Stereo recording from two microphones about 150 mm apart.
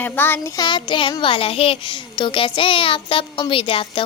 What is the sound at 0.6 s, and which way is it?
A child's voice, 30° left (ahead or behind).